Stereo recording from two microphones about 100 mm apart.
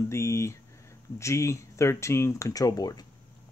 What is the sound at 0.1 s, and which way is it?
Speech, 30° left (ahead or behind).